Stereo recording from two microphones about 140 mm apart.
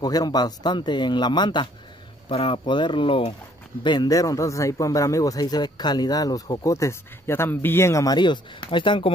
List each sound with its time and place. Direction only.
0.0 s a man's voice: 30° left (ahead or behind)